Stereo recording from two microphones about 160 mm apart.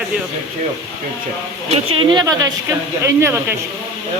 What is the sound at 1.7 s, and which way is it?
Speech, 30° right (ahead or behind).